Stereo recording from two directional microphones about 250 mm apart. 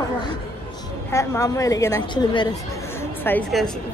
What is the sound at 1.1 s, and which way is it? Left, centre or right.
A woman's voice, centre.